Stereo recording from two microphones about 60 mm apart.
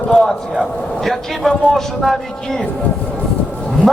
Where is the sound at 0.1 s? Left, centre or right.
Centre.